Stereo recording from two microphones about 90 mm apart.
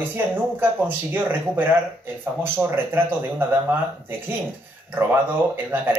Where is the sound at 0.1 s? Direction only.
20° right (ahead or behind).